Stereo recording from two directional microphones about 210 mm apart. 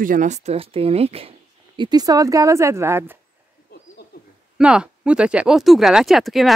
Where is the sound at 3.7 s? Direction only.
50° left (ahead or behind).